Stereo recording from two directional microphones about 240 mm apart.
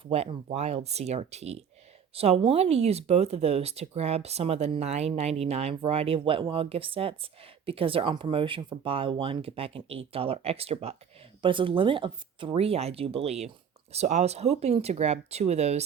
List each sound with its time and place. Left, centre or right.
0.1 s speech: right